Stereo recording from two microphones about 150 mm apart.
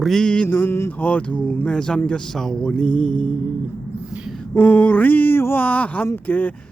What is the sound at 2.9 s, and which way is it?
Mantra, 55° left (ahead or behind).